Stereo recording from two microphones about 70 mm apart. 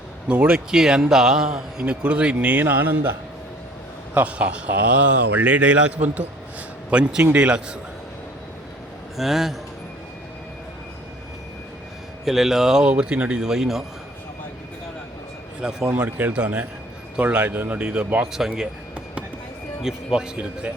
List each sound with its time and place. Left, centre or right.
0.3 s a man's voice: centre; by 3.2 s right
4.1 s a man's voice: centre
9.1 s speech: centre
12.2 s a man's voice: centre
15.6 s a man's voice: centre
16.0 s speech: right
18.3 s a man's voice: centre
19.8 s a man's voice: centre